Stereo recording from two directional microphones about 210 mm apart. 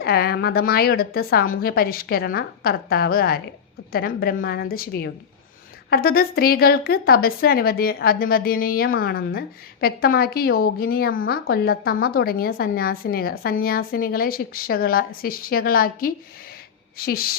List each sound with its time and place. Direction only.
0.0 s a woman's voice: 50° left (ahead or behind)